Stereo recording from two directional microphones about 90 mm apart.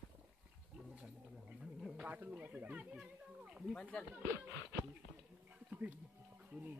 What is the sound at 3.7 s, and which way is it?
Speech, 10° left (ahead or behind).